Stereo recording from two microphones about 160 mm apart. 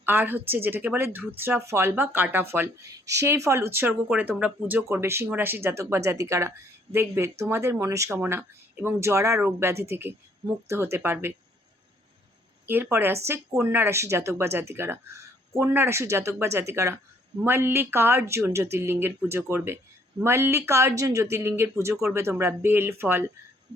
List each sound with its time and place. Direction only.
0.0 s speech: 10° right (ahead or behind)
12.6 s speech: 15° right (ahead or behind)